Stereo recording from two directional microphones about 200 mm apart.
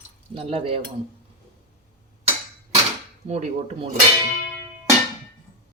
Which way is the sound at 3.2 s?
35° right (ahead or behind).